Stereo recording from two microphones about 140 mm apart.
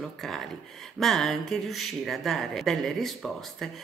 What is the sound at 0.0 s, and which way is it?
Speech, centre (ahead or behind).